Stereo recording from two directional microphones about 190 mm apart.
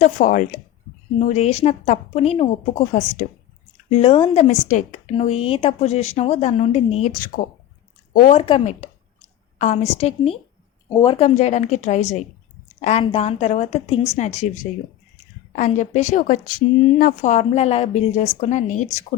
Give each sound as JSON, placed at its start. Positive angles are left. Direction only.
{"t": 0.0, "sound": "speech", "side_deg": 45}
{"t": 15.5, "sound": "speech", "side_deg": 40}